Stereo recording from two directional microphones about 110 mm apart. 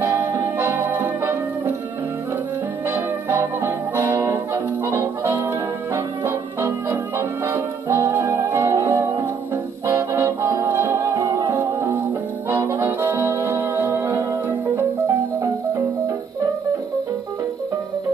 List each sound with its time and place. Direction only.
0.0 s music: 20° right (ahead or behind)
2.9 s music: 20° right (ahead or behind)